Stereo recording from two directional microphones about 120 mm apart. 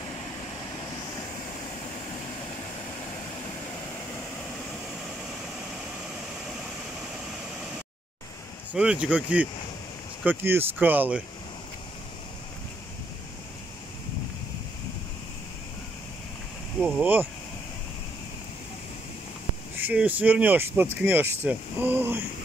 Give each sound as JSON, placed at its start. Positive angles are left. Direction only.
{"t": 8.7, "sound": "speech", "side_deg": -10}
{"t": 16.8, "sound": "speech", "side_deg": -15}
{"t": 19.8, "sound": "speech", "side_deg": -15}